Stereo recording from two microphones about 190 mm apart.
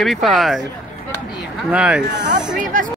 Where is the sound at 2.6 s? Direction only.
45° right (ahead or behind).